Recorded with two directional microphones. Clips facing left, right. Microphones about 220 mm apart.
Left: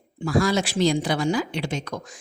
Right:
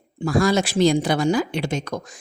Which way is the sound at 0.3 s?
45° right (ahead or behind).